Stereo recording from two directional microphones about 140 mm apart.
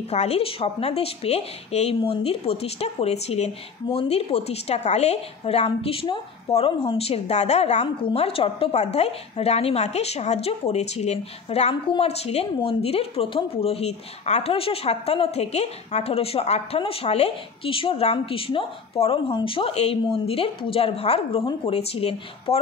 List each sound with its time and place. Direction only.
0.1 s a woman's voice: 50° left (ahead or behind)